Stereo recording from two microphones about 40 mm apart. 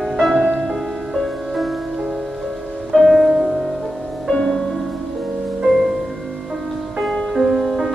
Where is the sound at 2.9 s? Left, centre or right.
Centre.